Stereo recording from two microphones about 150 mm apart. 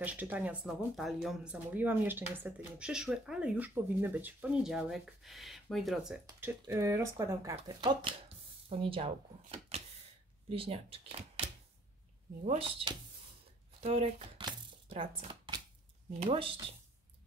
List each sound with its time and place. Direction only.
0.0 s speech: 10° right (ahead or behind)
6.2 s speech: 20° right (ahead or behind)
7.8 s speech: 35° right (ahead or behind)
14.4 s a sound: 40° right (ahead or behind)
16.3 s speech: 35° right (ahead or behind)